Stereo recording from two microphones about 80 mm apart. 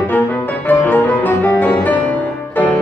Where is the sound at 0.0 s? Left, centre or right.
Left.